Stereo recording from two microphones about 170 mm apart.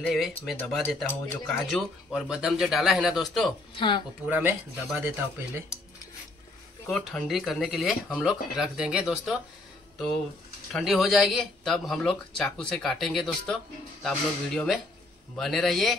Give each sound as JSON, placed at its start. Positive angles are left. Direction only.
{"t": 0.0, "sound": "speech", "side_deg": 0}
{"t": 3.7, "sound": "speech", "side_deg": 30}
{"t": 4.3, "sound": "speech", "side_deg": -10}
{"t": 6.9, "sound": "speech", "side_deg": 5}